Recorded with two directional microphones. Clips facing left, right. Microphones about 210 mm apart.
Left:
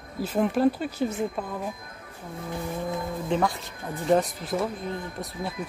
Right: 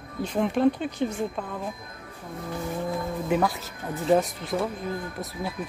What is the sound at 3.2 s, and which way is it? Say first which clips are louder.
Speech: right 1 dB; 5° right (ahead or behind).